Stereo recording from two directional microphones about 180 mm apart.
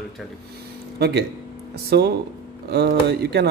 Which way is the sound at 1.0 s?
70° right (ahead or behind).